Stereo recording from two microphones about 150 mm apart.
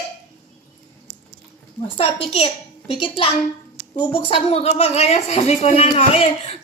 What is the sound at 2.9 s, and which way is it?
Speech, 35° left (ahead or behind).